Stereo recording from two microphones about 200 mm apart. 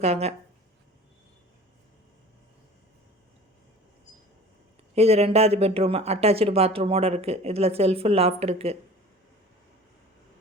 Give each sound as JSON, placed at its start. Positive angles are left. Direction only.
{"t": 0.0, "sound": "speech", "side_deg": -30}
{"t": 4.9, "sound": "speech", "side_deg": -30}